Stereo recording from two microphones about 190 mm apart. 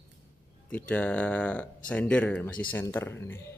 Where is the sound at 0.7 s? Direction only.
5° left (ahead or behind).